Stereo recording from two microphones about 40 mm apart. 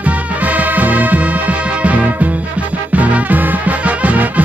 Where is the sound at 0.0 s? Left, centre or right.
Right.